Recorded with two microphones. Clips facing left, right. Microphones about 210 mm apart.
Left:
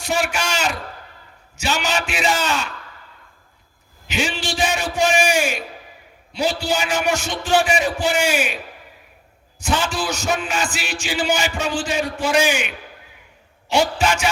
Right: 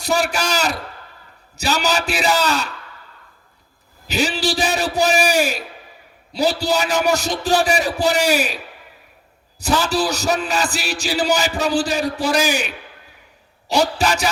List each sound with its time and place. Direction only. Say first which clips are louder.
0.0 s a man's voice: right 2 dB; 35° right (ahead or behind)
4.0 s a man's voice: right 4 dB; 35° right (ahead or behind)
9.6 s a man's voice: right 4 dB; 40° right (ahead or behind)